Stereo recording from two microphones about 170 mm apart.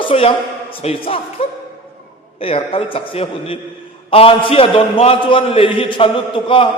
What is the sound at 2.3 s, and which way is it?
A man's voice, 35° left (ahead or behind).